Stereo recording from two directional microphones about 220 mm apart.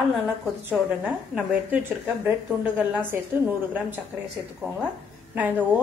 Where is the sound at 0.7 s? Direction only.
5° right (ahead or behind).